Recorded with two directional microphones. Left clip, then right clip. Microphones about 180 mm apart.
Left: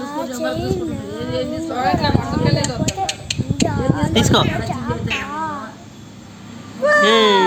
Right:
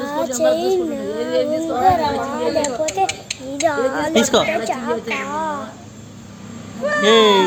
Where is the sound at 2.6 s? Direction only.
60° left (ahead or behind).